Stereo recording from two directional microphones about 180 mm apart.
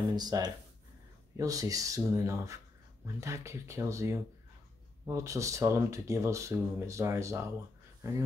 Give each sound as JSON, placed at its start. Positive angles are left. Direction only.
{"t": 0.1, "sound": "speech", "side_deg": -20}